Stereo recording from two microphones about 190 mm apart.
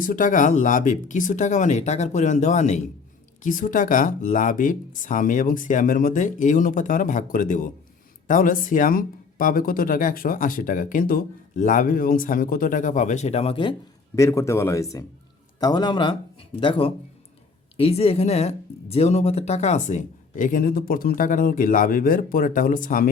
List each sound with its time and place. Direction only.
0.0 s speech: 45° left (ahead or behind); by 13.7 s 30° left (ahead or behind)
14.2 s a man's voice: 15° left (ahead or behind); by 23.0 s 45° left (ahead or behind)